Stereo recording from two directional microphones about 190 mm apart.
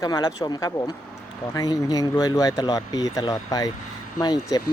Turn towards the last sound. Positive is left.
turn(degrees=20)  # may be behind; listen again after turning